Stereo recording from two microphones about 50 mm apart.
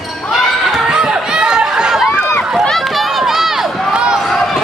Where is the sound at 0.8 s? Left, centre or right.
Centre.